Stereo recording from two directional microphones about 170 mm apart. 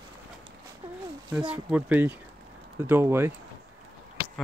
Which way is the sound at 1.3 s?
5° right (ahead or behind).